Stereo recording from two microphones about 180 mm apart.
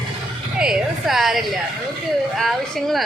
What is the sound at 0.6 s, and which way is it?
A woman's voice, 5° right (ahead or behind).